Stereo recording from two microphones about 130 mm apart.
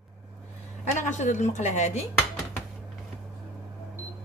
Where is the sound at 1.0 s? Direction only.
70° left (ahead or behind).